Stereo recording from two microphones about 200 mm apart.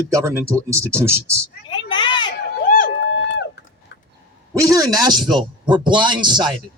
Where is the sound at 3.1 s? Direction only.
60° left (ahead or behind).